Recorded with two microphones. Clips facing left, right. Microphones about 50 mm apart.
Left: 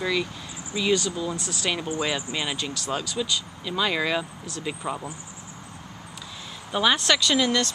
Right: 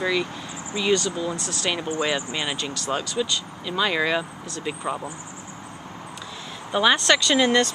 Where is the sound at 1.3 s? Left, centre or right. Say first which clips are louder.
Right 2 dB; centre.